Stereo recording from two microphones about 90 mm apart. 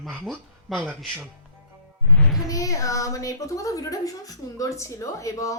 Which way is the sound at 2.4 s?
40° left (ahead or behind).